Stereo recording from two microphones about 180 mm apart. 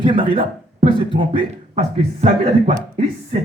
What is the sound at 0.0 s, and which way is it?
Speech, 30° right (ahead or behind).